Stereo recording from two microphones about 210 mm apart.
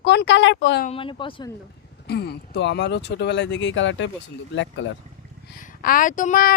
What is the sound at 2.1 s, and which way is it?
Speech, 50° left (ahead or behind).